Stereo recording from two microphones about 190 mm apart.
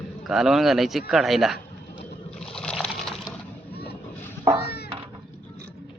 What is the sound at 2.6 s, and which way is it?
Water, 5° left (ahead or behind).